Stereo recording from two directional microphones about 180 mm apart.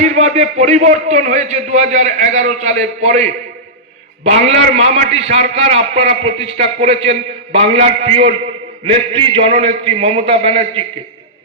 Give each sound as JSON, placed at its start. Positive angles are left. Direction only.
{"t": 0.0, "sound": "a man's voice", "side_deg": -40}